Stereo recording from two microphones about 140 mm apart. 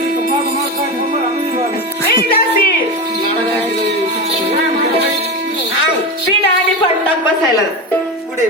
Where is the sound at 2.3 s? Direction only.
90° left.